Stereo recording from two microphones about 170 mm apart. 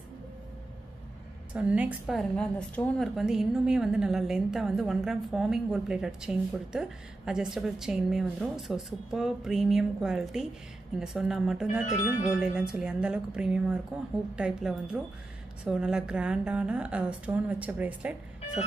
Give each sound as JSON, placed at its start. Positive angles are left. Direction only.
{"t": 1.5, "sound": "a woman's voice", "side_deg": -5}
{"t": 11.8, "sound": "speech", "side_deg": 40}
{"t": 12.3, "sound": "a woman's voice", "side_deg": -5}